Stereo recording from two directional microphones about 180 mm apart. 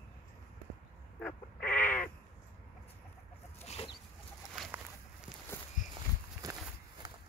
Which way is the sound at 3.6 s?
35° left (ahead or behind).